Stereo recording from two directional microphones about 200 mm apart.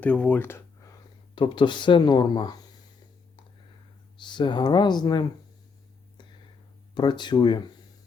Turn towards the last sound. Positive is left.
turn(degrees=20)  # may be behind; listen again after turning